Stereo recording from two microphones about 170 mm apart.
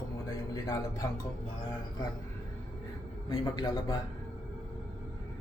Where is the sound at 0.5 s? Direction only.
20° left (ahead or behind).